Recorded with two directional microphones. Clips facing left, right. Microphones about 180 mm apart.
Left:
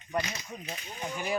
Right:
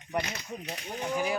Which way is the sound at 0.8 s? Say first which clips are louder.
Right 8 dB; 65° right (ahead or behind).